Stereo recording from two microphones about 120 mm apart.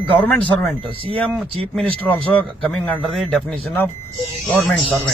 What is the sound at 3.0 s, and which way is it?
Speech, centre (ahead or behind).